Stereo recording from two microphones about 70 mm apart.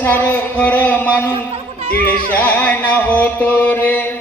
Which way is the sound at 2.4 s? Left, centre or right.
Left.